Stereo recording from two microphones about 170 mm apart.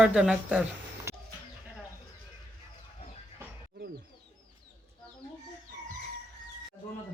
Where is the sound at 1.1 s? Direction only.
15° right (ahead or behind).